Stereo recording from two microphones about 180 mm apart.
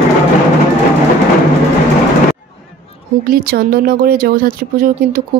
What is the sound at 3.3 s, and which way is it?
Speech, 55° right (ahead or behind).